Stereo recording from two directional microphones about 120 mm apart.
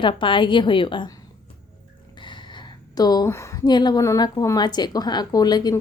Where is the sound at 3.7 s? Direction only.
35° left (ahead or behind).